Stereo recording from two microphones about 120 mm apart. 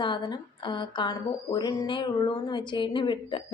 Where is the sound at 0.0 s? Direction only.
40° left (ahead or behind).